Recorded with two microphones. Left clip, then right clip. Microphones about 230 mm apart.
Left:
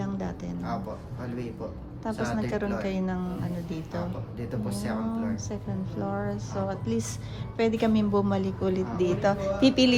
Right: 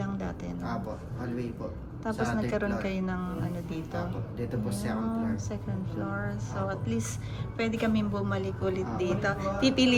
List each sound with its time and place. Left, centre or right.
0.0 s music: centre
2.0 s speech: centre
2.7 s a woman's voice: centre
4.4 s a woman's voice: centre
6.3 s a woman's voice: centre